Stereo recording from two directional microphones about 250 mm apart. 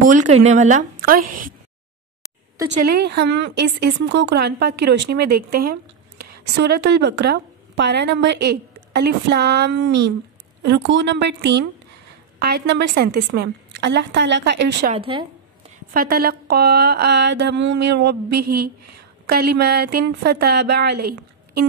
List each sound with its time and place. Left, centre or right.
0.0 s a woman's voice: right
2.7 s a woman's voice: right
14.9 s speech: right
15.9 s a woman's voice: right
19.2 s a woman's voice: right